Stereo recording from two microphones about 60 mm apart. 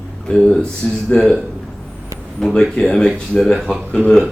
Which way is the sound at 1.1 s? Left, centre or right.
Centre.